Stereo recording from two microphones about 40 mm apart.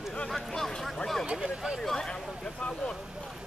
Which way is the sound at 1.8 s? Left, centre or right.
Centre.